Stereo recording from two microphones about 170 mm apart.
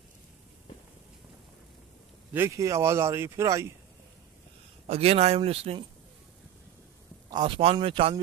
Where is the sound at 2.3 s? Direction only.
15° right (ahead or behind).